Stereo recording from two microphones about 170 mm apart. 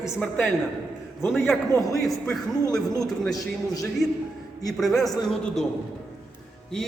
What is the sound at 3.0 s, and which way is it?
Speech, centre (ahead or behind).